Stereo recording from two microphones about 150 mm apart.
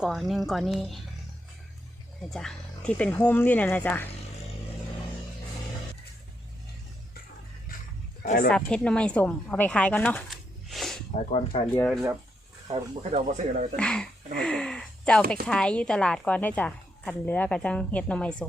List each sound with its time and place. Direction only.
0.0 s speech: centre (ahead or behind)
2.3 s a woman's voice: 5° left (ahead or behind)
8.2 s speech: 55° left (ahead or behind)
8.4 s a woman's voice: 5° left (ahead or behind)
10.2 s a sound: centre (ahead or behind)
11.3 s speech: 45° left (ahead or behind)
13.0 s speech: 45° right (ahead or behind)
13.7 s a woman's voice: 5° left (ahead or behind)